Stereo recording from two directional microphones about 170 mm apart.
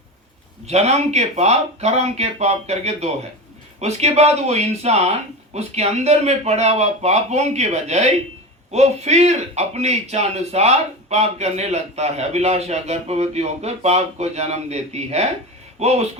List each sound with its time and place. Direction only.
0.7 s speech: 40° right (ahead or behind)